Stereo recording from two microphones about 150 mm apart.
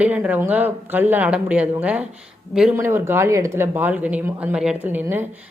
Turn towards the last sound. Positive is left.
turn(degrees=-15)  # may be behind; listen again after turning